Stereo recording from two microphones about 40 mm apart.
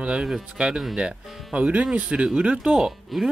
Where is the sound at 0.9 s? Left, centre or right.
Right.